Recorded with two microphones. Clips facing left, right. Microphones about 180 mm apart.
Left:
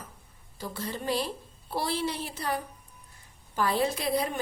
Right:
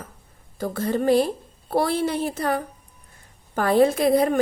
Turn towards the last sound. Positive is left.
turn(degrees=-50)  # may be behind; listen again after turning